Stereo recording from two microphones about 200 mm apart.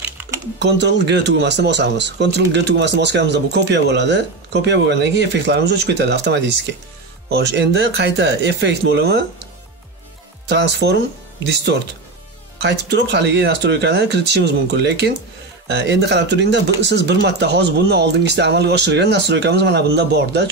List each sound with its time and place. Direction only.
0.6 s speech: 60° right (ahead or behind)
10.5 s speech: 60° right (ahead or behind)